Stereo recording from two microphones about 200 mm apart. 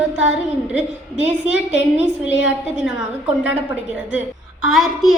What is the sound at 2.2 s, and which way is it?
Speech, 65° left (ahead or behind).